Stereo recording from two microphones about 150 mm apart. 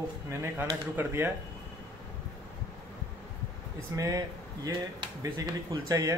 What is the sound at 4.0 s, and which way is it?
Speech, 25° right (ahead or behind).